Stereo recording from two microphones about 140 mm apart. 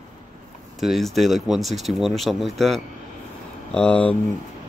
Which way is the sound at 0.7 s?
Centre (ahead or behind).